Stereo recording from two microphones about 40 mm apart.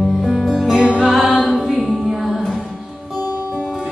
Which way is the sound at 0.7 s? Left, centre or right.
Right.